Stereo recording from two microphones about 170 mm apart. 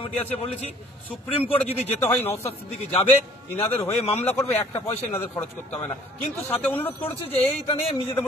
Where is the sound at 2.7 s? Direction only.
35° left (ahead or behind).